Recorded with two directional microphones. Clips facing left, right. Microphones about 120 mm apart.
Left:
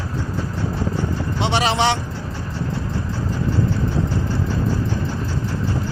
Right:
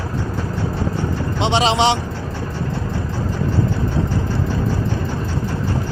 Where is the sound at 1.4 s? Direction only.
20° right (ahead or behind).